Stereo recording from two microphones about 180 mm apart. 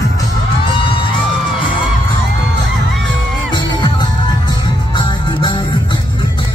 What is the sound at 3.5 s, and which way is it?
Music, 25° left (ahead or behind).